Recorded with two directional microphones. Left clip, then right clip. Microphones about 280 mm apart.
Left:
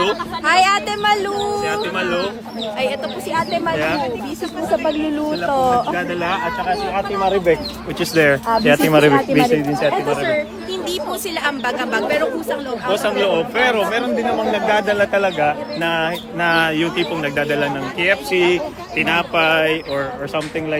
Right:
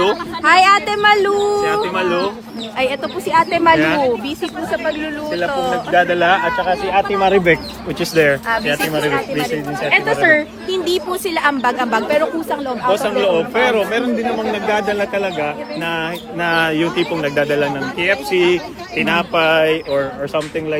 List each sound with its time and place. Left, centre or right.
0.4 s bird: right
3.3 s speech: right
5.5 s speech: centre
6.0 s speech: right
7.9 s speech: centre
8.4 s speech: left
10.2 s speech: right
12.9 s speech: centre